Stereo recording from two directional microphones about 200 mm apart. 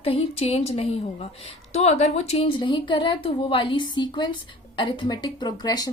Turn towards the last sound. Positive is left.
turn(degrees=20)  # may be behind; listen again after turning